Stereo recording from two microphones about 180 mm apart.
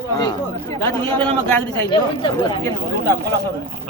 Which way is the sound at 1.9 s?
25° left (ahead or behind).